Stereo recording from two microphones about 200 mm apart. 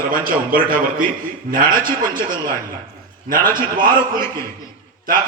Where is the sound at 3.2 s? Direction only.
45° right (ahead or behind).